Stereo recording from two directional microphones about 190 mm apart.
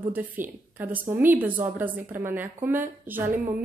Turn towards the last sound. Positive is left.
turn(degrees=-10)  # may be behind; listen again after turning